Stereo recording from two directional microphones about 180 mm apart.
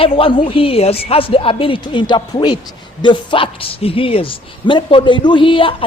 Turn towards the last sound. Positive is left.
turn(degrees=30)  # may be behind; listen again after turning